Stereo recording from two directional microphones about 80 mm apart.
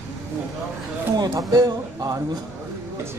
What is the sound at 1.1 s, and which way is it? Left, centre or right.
Speech, right.